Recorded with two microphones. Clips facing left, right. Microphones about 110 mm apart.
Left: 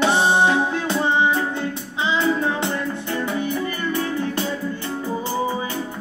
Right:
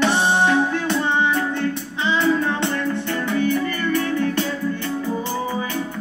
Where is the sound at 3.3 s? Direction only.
20° left (ahead or behind).